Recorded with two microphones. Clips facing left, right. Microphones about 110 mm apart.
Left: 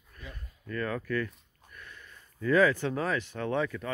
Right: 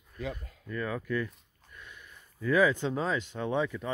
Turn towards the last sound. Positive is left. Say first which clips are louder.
# even
turn(degrees=-15)  # may be behind; listen again after turning